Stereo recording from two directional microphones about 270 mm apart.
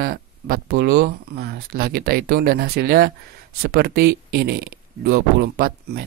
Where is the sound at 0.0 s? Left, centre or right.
Right.